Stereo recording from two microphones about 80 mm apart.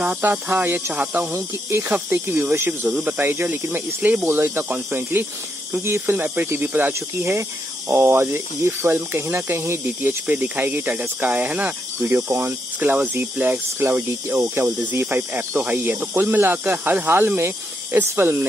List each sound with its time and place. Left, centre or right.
0.0 s speech: right
6.9 s speech: right
12.0 s speech: right